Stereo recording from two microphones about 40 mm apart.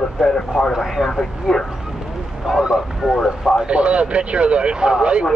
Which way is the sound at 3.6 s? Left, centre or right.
Right.